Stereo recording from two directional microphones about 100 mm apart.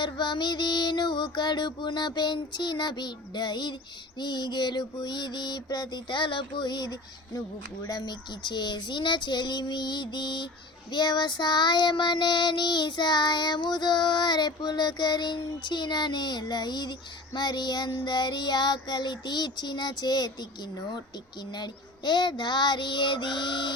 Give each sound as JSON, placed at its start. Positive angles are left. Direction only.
{"t": 0.0, "sound": "child singing", "side_deg": 50}
{"t": 21.5, "sound": "child singing", "side_deg": 45}